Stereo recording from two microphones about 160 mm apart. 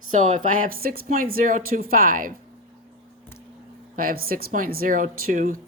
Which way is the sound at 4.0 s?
65° right (ahead or behind).